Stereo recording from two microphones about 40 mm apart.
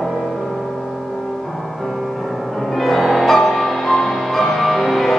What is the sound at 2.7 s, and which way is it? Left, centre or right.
Music, centre.